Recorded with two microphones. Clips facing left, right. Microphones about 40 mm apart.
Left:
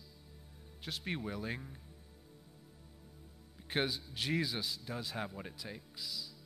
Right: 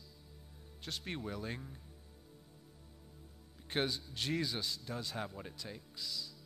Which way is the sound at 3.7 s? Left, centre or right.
Centre.